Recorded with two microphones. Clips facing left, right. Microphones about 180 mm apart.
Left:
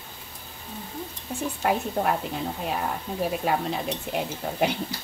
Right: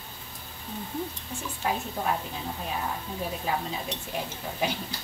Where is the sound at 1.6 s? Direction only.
65° left (ahead or behind).